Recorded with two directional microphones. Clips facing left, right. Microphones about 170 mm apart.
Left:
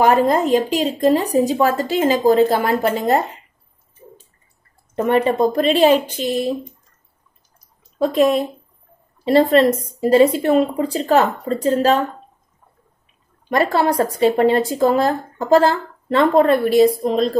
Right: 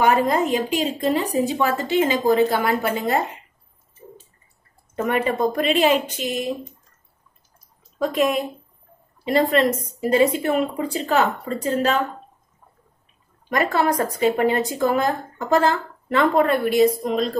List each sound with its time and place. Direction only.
0.0 s speech: 35° left (ahead or behind)
5.0 s speech: 30° left (ahead or behind)
8.0 s speech: 30° left (ahead or behind)
13.5 s speech: 30° left (ahead or behind)